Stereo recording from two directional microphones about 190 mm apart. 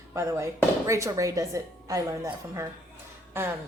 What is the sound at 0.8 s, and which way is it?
A woman's voice, 15° right (ahead or behind).